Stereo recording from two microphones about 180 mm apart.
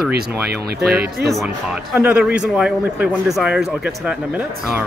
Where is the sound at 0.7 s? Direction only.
60° right (ahead or behind).